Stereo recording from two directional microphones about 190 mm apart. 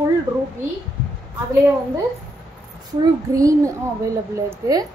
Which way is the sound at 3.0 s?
15° right (ahead or behind).